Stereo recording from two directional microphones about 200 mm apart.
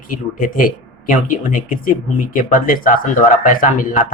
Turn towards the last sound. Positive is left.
turn(degrees=40)  # may be behind; listen again after turning